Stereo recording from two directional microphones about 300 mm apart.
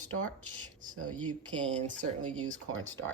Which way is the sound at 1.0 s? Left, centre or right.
Centre.